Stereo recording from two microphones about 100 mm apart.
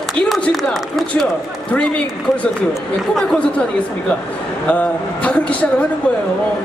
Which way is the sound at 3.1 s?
5° left (ahead or behind).